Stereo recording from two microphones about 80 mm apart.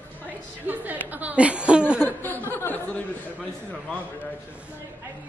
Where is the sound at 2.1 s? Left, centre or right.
Left.